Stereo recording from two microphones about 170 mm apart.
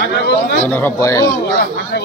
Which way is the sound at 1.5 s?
65° left (ahead or behind).